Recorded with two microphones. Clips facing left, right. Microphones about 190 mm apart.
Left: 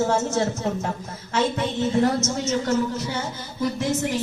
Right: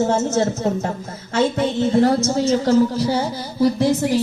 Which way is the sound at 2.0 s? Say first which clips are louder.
Right 6 dB; 35° right (ahead or behind).